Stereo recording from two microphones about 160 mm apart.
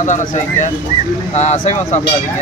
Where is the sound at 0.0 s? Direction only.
50° left (ahead or behind).